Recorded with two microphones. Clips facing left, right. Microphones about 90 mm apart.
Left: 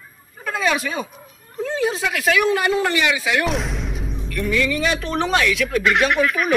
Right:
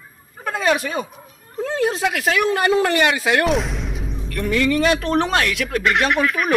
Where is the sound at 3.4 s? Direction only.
Centre (ahead or behind).